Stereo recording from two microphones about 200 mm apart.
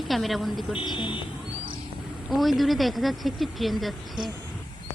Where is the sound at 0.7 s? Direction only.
25° left (ahead or behind).